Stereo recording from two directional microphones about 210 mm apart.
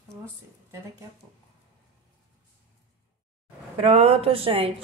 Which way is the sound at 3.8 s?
30° right (ahead or behind).